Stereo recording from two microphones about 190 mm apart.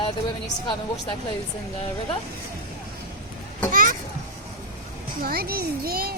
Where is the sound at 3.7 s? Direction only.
45° right (ahead or behind).